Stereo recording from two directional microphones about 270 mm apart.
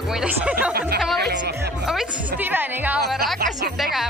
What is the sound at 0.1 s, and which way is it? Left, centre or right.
Speech, centre.